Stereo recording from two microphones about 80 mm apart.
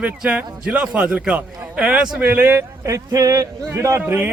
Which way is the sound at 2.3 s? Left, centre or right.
Right.